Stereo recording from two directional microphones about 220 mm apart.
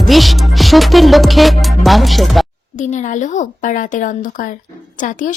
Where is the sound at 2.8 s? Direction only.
35° left (ahead or behind).